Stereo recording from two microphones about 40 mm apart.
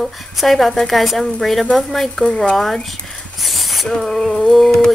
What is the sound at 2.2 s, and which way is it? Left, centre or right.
Speech, left.